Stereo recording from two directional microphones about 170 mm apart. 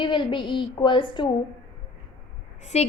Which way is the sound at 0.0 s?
30° left (ahead or behind).